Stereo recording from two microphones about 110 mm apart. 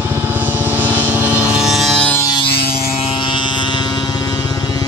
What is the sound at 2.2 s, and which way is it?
Vehicle, 50° left (ahead or behind).